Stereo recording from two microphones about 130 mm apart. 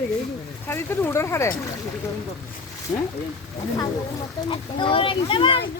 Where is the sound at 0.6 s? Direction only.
15° left (ahead or behind).